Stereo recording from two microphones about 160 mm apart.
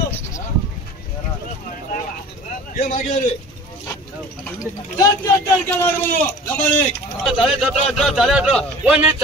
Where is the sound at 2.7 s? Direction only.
55° left (ahead or behind).